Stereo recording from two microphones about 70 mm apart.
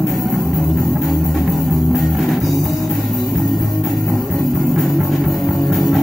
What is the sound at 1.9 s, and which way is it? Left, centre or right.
Music, centre.